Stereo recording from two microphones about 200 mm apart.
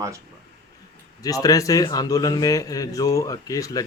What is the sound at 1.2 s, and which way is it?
A man's voice, 15° left (ahead or behind).